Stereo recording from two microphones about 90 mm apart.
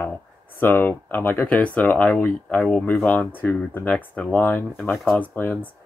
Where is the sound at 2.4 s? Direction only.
5° left (ahead or behind).